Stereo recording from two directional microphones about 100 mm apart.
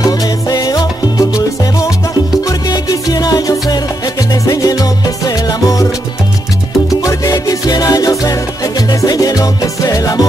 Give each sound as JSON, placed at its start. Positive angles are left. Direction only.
{"t": 0.0, "sound": "salsa music", "side_deg": 40}
{"t": 2.3, "sound": "music", "side_deg": 40}